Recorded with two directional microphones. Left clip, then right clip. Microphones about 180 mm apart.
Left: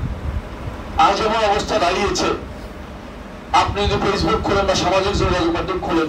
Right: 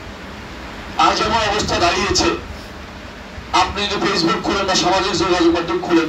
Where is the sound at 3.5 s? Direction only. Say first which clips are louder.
Even; 50° left (ahead or behind).